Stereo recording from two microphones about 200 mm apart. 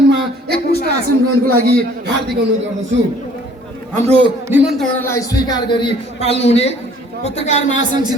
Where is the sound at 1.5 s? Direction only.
50° right (ahead or behind).